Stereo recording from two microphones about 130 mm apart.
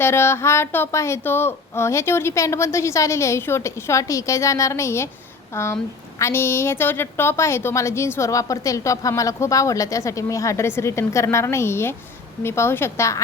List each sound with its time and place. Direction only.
0.0 s a woman's voice: 20° left (ahead or behind)